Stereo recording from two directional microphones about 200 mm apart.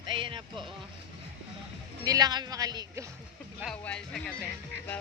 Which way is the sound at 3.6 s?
5° left (ahead or behind).